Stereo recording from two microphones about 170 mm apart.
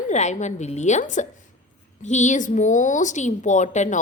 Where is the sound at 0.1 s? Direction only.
45° left (ahead or behind).